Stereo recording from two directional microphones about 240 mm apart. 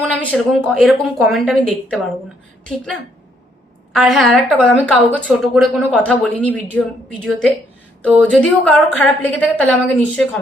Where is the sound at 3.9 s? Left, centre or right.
Centre.